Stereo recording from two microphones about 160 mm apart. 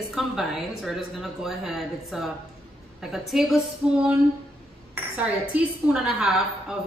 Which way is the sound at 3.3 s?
Centre (ahead or behind).